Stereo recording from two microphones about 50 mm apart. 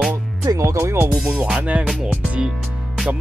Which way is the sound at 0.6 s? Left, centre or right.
Right.